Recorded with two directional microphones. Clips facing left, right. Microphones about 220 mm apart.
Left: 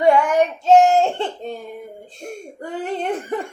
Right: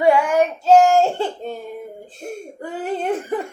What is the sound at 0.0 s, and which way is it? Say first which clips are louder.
Child singing: even; 5° right (ahead or behind).